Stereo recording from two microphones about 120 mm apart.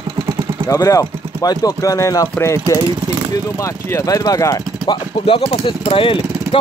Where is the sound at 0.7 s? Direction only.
25° left (ahead or behind).